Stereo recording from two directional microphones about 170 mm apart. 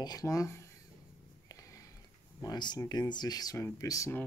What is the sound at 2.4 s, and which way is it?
Speech, 25° left (ahead or behind).